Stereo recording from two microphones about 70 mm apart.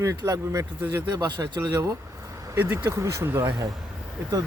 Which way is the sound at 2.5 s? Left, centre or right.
Right.